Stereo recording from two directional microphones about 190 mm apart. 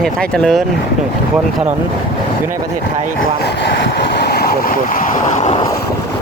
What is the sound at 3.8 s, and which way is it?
Vehicle, 55° left (ahead or behind).